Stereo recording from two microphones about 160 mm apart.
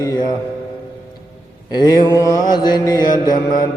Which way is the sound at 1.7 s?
25° left (ahead or behind).